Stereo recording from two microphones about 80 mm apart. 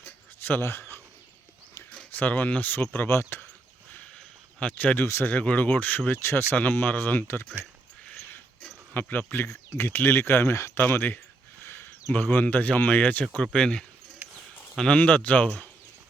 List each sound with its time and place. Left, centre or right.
0.0 s a sound: left
2.1 s speech: left
4.6 s speech: centre
8.9 s speech: left
9.5 s speech: left; by 15.7 s centre